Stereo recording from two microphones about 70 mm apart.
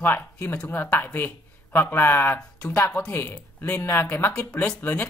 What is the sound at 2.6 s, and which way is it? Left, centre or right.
Speech, left.